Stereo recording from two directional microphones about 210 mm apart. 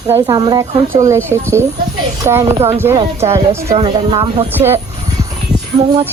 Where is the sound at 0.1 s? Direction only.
20° right (ahead or behind).